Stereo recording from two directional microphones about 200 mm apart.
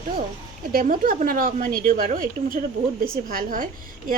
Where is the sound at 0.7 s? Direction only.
45° right (ahead or behind).